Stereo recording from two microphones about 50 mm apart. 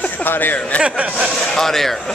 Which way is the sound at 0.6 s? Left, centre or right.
Left.